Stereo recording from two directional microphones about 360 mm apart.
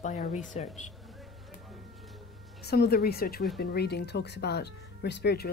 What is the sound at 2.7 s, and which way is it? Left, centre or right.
Speech, left.